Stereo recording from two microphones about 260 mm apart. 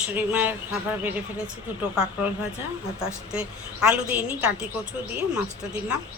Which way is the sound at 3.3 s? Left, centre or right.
Centre.